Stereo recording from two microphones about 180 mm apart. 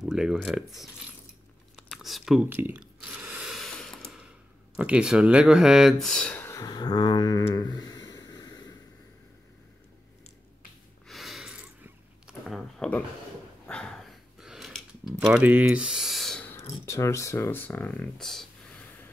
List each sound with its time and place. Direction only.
0.0 s speech: 5° right (ahead or behind)
1.8 s a sound: centre (ahead or behind)
4.7 s speech: 5° right (ahead or behind); by 7.4 s 20° left (ahead or behind)
7.5 s snort: 25° left (ahead or behind)
11.1 s a sound: centre (ahead or behind)
16.8 s speech: 15° left (ahead or behind)